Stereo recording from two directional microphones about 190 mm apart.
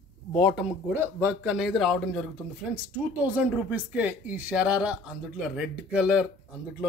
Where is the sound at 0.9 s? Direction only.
10° right (ahead or behind).